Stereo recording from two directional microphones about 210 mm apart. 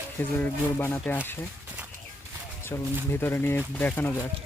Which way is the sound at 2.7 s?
15° left (ahead or behind).